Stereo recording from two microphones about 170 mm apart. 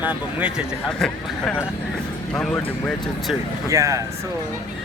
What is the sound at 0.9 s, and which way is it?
Speech, 5° left (ahead or behind).